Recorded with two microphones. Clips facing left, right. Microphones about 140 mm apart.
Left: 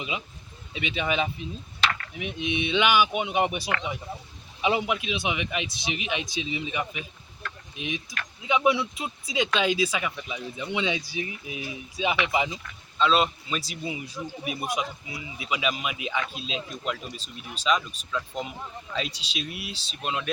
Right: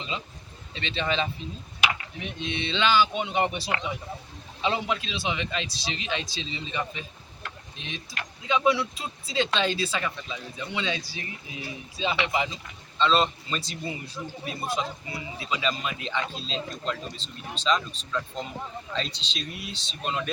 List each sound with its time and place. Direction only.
0.7 s a man's voice: 10° left (ahead or behind)
1.8 s a sound: 15° right (ahead or behind)
2.1 s a man's voice: 15° left (ahead or behind)
3.6 s speech: 25° right (ahead or behind)
4.6 s a man's voice: 15° left (ahead or behind)
13.0 s a man's voice: 5° left (ahead or behind)